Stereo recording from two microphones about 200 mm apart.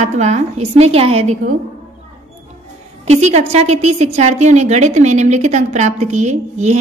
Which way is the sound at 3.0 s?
35° right (ahead or behind).